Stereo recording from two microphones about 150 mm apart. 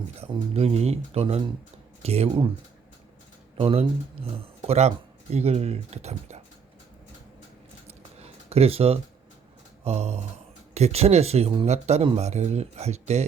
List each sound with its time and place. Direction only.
0.2 s speech: 40° right (ahead or behind)
3.6 s speech: 40° right (ahead or behind)
7.9 s a sound: 45° right (ahead or behind)
9.8 s speech: 45° right (ahead or behind)